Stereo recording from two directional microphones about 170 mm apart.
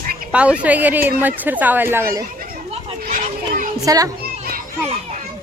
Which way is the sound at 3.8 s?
20° right (ahead or behind).